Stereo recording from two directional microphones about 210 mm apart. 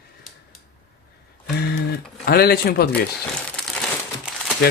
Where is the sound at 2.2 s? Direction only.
45° left (ahead or behind).